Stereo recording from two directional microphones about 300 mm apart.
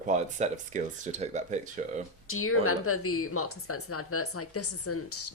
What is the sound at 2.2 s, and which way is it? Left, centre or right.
A woman's voice, left.